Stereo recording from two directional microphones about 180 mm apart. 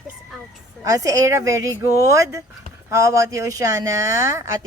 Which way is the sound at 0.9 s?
20° right (ahead or behind).